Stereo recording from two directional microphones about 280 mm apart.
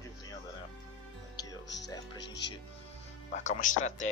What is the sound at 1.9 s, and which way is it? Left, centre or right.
Speech, centre.